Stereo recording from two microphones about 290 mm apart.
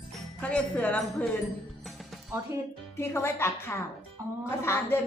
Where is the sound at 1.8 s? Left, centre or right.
Centre.